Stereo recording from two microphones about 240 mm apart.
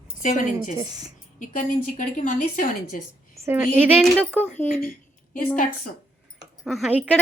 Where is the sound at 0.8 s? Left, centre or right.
Centre.